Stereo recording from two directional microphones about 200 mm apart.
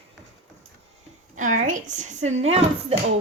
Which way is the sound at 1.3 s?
40° right (ahead or behind).